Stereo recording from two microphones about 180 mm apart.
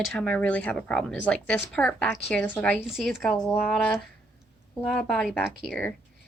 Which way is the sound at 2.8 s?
Centre (ahead or behind).